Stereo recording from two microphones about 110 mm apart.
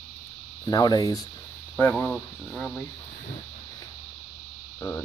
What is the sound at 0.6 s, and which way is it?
Speech, 35° left (ahead or behind).